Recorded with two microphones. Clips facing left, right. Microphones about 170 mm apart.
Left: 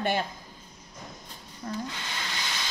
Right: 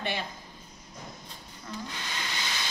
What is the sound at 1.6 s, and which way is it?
Speech, 50° left (ahead or behind).